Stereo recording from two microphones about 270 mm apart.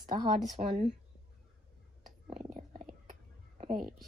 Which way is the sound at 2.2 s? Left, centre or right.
Right.